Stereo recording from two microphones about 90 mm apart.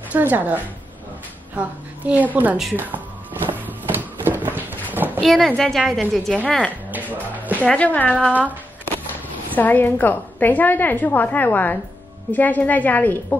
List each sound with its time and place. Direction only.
0.1 s a woman's voice: 20° right (ahead or behind)
2.7 s music: 20° right (ahead or behind)
3.9 s a sound: 20° right (ahead or behind)
5.2 s a woman's voice: centre (ahead or behind)
6.4 s a woman's voice: 10° left (ahead or behind)
6.9 s music: 20° right (ahead or behind)
7.6 s a woman's voice: 15° left (ahead or behind)
8.3 s a woman's voice: 20° right (ahead or behind)
9.5 s a woman's voice: 20° left (ahead or behind)